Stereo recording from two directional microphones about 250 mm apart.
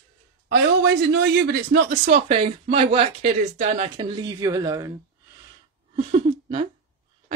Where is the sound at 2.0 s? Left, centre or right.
Right.